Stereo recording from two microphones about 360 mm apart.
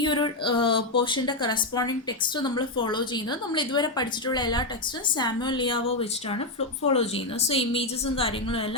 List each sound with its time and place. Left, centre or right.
0.0 s a woman's voice: centre